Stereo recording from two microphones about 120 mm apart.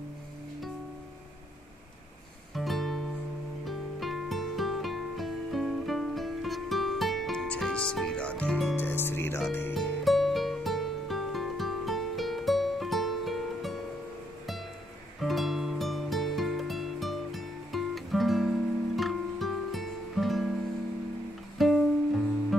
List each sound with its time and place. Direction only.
2.5 s music: centre (ahead or behind)
8.7 s music: 20° left (ahead or behind)
10.0 s music: centre (ahead or behind)
15.1 s music: centre (ahead or behind)
21.5 s music: centre (ahead or behind)